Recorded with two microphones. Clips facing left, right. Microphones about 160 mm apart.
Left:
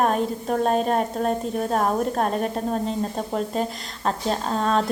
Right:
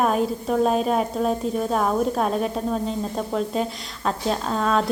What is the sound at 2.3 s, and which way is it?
Speech, centre (ahead or behind).